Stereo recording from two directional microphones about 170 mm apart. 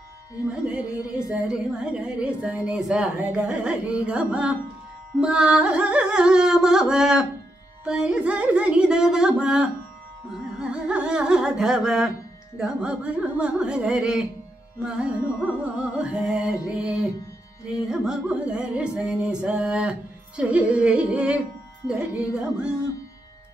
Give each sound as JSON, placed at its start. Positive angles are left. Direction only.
{"t": 0.5, "sound": "a woman's voice", "side_deg": -10}
{"t": 5.1, "sound": "music", "side_deg": -5}
{"t": 17.7, "sound": "a woman's voice", "side_deg": -5}